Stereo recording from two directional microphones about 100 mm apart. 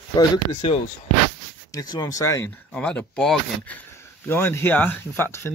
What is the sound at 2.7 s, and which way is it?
Speech, 10° left (ahead or behind).